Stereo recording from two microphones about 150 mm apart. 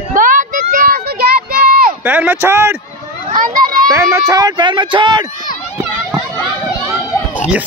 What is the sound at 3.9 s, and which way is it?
Speech, 20° right (ahead or behind).